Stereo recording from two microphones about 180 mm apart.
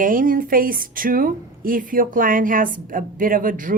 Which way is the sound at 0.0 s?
50° right (ahead or behind).